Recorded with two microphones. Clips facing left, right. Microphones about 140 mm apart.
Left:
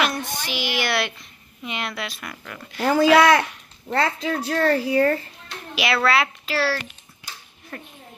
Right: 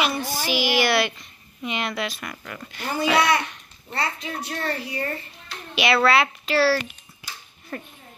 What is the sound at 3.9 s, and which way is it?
A woman's voice, 55° left (ahead or behind).